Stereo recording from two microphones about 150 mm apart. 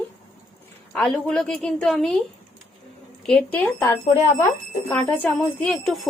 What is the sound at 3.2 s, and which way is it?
A woman's voice, 5° left (ahead or behind).